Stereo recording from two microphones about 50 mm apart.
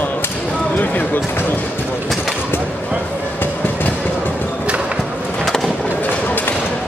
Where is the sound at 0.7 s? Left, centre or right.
Left.